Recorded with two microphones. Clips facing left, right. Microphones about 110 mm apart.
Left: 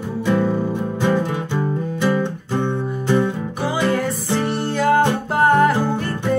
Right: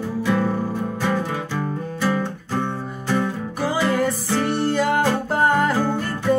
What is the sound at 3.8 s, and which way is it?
Music, centre (ahead or behind).